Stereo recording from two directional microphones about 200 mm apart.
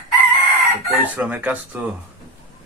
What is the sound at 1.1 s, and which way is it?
Speech, 5° right (ahead or behind).